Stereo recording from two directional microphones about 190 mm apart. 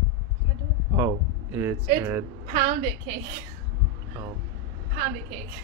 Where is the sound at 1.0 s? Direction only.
15° right (ahead or behind).